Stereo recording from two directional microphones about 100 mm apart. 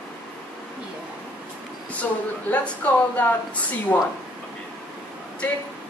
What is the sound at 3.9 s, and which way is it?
Speech, 25° left (ahead or behind).